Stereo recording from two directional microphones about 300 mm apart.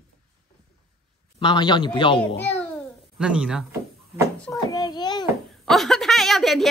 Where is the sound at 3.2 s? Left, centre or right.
Centre.